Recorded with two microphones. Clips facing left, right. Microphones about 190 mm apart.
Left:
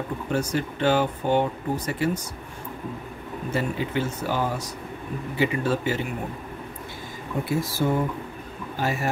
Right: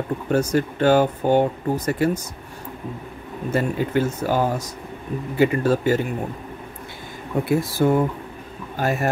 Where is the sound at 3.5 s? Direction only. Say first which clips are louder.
Right 5 dB; 45° right (ahead or behind).